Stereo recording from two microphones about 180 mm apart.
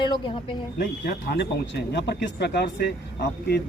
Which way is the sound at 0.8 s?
70° left (ahead or behind).